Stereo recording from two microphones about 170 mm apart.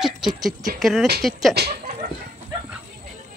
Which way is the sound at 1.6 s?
75° right (ahead or behind).